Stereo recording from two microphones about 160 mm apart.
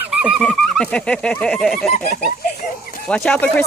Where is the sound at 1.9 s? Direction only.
65° left (ahead or behind).